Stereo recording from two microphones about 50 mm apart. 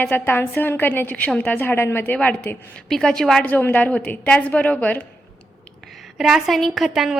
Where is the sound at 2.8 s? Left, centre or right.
Centre.